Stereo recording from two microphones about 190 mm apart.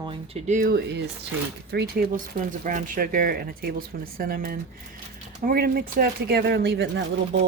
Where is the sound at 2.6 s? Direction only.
45° right (ahead or behind).